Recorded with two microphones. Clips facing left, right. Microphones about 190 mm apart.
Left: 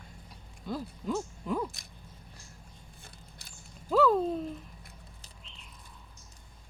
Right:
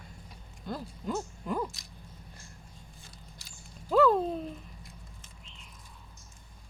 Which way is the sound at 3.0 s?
55° left (ahead or behind).